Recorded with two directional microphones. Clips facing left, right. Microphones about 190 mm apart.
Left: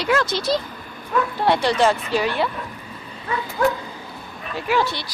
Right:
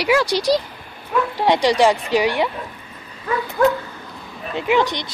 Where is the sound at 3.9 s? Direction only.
10° left (ahead or behind).